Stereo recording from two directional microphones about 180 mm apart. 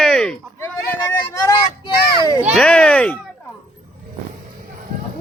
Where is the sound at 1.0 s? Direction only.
15° left (ahead or behind).